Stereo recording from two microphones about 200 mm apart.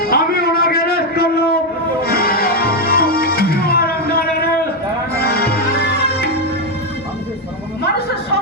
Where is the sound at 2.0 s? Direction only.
50° left (ahead or behind).